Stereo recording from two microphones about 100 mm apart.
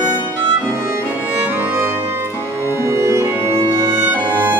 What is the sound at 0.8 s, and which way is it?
Music, 25° right (ahead or behind).